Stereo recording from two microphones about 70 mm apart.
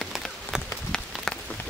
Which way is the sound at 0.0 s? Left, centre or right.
Centre.